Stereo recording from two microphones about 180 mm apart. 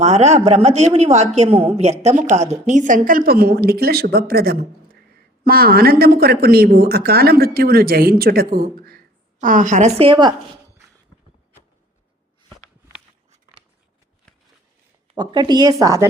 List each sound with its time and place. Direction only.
0.0 s speech: 40° right (ahead or behind)
15.1 s speech: 25° right (ahead or behind)